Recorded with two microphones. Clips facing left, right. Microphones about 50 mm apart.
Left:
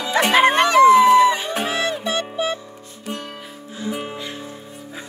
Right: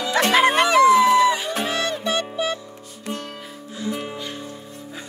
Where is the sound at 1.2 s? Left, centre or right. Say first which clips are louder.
Left 2 dB; left.